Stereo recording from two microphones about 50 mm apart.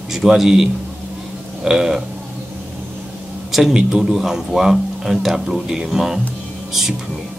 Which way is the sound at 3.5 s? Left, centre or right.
Centre.